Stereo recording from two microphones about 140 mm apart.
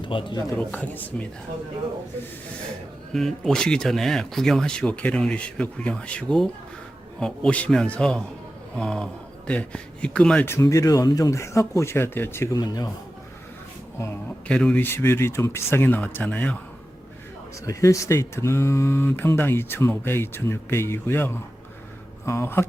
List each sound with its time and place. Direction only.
0.0 s speech: 35° left (ahead or behind)
0.5 s speech: 10° left (ahead or behind)
3.1 s speech: centre (ahead or behind); by 12.9 s 30° left (ahead or behind)
14.0 s speech: 10° left (ahead or behind)
17.7 s speech: 20° left (ahead or behind)